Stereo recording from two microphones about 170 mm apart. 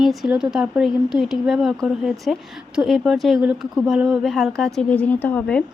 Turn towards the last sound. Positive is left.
turn(degrees=10)  # may be behind; listen again after turning